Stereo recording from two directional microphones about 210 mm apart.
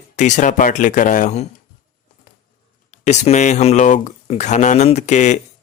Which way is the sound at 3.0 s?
35° left (ahead or behind).